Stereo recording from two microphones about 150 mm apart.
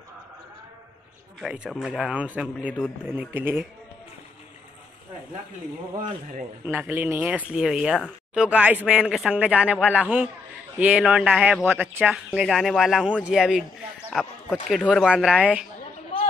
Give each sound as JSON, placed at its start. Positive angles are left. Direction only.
{"t": 1.4, "sound": "speech", "side_deg": -5}
{"t": 6.6, "sound": "speech", "side_deg": -15}
{"t": 12.4, "sound": "speech", "side_deg": 0}
{"t": 16.1, "sound": "a sound", "side_deg": 35}